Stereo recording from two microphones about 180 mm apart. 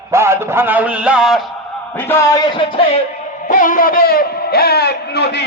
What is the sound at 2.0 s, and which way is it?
Speech, 15° left (ahead or behind).